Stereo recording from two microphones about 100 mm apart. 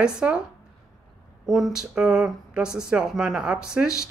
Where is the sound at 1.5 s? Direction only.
5° right (ahead or behind).